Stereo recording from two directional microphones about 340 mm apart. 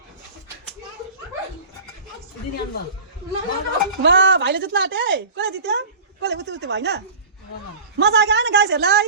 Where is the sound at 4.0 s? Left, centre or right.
Right.